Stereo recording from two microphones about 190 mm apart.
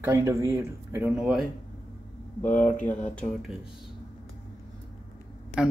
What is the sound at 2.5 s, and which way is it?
Speech, 10° left (ahead or behind).